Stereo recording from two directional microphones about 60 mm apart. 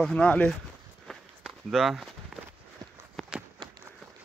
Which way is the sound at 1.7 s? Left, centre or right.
Centre.